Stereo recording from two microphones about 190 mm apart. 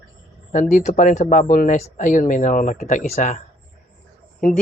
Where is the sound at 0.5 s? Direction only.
40° left (ahead or behind).